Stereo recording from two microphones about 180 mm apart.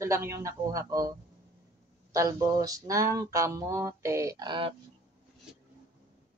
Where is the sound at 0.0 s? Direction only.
15° right (ahead or behind).